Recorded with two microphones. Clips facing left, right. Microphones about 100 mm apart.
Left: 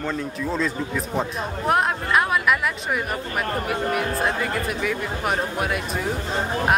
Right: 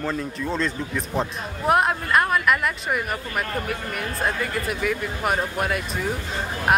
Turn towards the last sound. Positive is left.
turn(degrees=0)  # may be behind; listen again after turning